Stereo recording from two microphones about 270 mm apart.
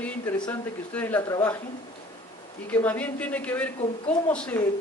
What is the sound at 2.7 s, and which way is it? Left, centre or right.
Speech, centre.